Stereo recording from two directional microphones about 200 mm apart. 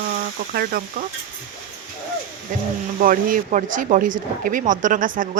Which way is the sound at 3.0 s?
45° right (ahead or behind).